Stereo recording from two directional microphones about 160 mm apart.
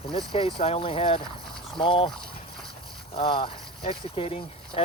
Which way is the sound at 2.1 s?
5° left (ahead or behind).